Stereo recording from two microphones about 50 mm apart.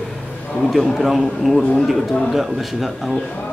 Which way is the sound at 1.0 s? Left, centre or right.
Centre.